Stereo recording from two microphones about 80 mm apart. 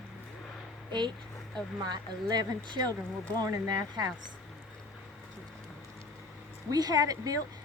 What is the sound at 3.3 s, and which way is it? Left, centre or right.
Speech, right.